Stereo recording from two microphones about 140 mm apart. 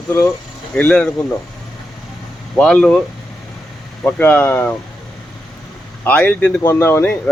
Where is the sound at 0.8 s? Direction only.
5° left (ahead or behind).